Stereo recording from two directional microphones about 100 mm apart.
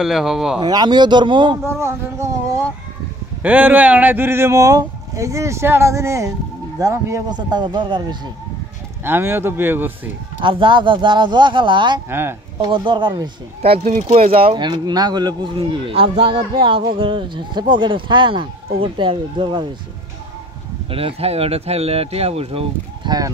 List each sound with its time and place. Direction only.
0.0 s speech: 5° right (ahead or behind)
0.6 s speech: 45° right (ahead or behind)
1.7 s a sound: 30° right (ahead or behind)
3.4 s speech: 15° right (ahead or behind); by 7.2 s 35° right (ahead or behind)
7.2 s speech: 45° right (ahead or behind)
9.0 s speech: 20° right (ahead or behind)
10.4 s speech: 55° right (ahead or behind)
12.1 s speech: 20° right (ahead or behind)
12.5 s speech: 55° right (ahead or behind)
14.1 s speech: 70° right (ahead or behind); by 15.5 s 45° right (ahead or behind)
15.5 s speech: 65° right (ahead or behind)
20.9 s speech: 80° right
23.0 s speech: 40° right (ahead or behind)